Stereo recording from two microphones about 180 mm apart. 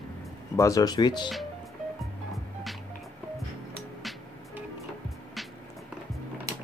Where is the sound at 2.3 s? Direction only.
Centre (ahead or behind).